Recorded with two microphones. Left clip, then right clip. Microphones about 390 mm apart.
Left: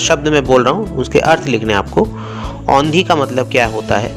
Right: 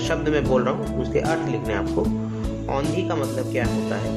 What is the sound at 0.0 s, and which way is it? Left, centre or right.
A man's voice, left.